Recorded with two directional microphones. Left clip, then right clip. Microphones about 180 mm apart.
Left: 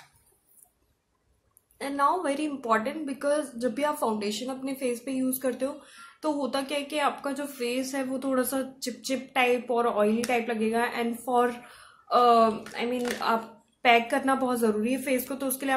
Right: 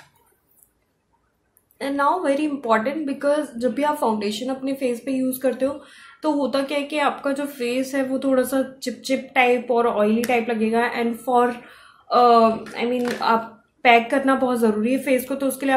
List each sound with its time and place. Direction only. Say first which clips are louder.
1.8 s a woman's voice: right 5 dB; centre (ahead or behind)
12.3 s speech: right 6 dB; 15° left (ahead or behind)
12.9 s speech: right 6 dB; 35° left (ahead or behind)
13.8 s a woman's voice: right 6 dB; 5° left (ahead or behind)